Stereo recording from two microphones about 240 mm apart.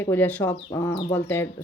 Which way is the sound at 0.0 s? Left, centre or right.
Centre.